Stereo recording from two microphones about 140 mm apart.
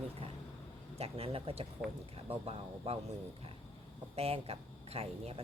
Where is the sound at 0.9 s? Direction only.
45° right (ahead or behind).